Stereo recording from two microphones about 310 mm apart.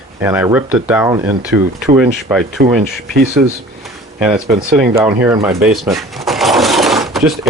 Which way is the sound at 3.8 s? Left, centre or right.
Centre.